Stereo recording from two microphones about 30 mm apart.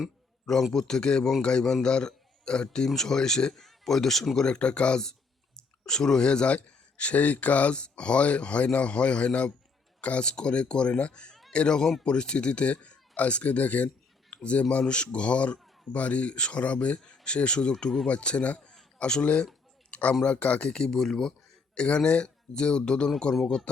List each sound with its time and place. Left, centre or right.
0.7 s a man's voice: centre
2.9 s speech: centre
4.4 s speech: left
5.5 s speech: left
7.7 s speech: left
10.2 s speech: left
16.3 s speech: left
19.2 s speech: left
19.9 s a sound: left
20.2 s speech: left
20.7 s speech: left
21.0 s speech: centre
21.8 s speech: left